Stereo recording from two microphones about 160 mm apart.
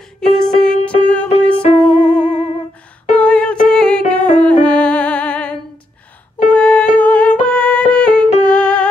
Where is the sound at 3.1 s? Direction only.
5° left (ahead or behind).